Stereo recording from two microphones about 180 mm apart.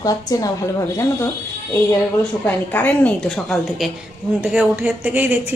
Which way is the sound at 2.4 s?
10° left (ahead or behind).